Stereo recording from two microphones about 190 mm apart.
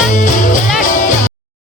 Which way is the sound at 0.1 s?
40° left (ahead or behind).